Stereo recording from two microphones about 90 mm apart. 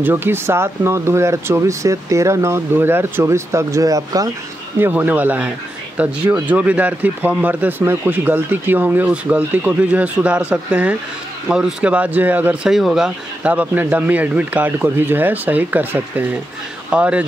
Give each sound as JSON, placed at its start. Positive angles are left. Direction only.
{"t": 0.0, "sound": "speech", "side_deg": -25}
{"t": 4.7, "sound": "a man's voice", "side_deg": -20}
{"t": 12.6, "sound": "a man's voice", "side_deg": -5}